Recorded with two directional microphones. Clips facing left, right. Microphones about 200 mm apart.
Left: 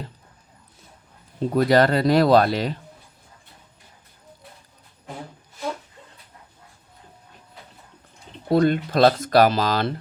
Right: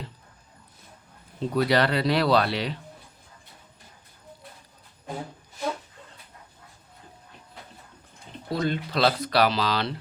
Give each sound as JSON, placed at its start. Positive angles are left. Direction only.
{"t": 1.5, "sound": "speech", "side_deg": 45}
{"t": 8.4, "sound": "speech", "side_deg": 55}